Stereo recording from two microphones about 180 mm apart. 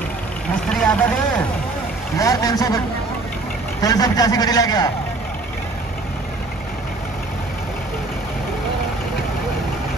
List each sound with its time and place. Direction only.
0.7 s speech: 5° left (ahead or behind)
2.1 s a man's voice: 20° left (ahead or behind)
3.8 s a man's voice: 20° left (ahead or behind)